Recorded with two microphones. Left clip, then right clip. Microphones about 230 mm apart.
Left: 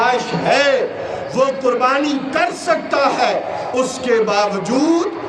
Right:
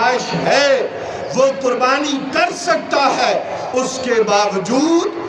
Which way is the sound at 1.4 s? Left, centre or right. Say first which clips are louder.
Right 1 dB; centre.